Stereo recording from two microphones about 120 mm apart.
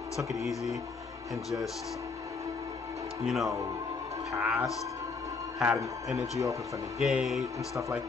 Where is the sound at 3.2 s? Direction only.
Centre (ahead or behind).